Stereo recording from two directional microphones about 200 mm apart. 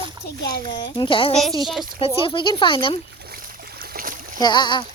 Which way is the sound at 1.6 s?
Centre (ahead or behind).